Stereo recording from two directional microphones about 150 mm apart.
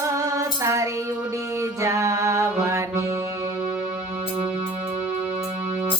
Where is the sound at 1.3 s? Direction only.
20° right (ahead or behind).